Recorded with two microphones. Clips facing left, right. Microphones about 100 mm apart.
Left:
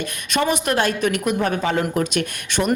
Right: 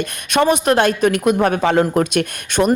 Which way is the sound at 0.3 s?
50° right (ahead or behind).